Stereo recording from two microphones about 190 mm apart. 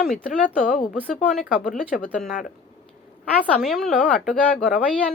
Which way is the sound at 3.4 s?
5° left (ahead or behind).